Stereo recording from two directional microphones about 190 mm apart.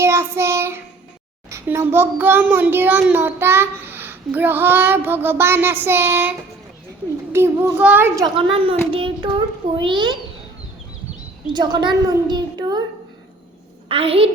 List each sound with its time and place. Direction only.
0.0 s child singing: 15° right (ahead or behind)
1.5 s a child's voice: 15° right (ahead or behind)
7.3 s a child's voice: 15° right (ahead or behind)
11.5 s a child's voice: 20° right (ahead or behind)
13.8 s a woman's voice: 30° right (ahead or behind)